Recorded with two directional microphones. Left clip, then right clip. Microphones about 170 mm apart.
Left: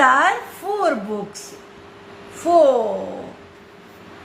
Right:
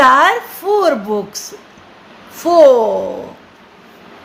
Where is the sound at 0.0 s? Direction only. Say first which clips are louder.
Right 6 dB; 50° right (ahead or behind).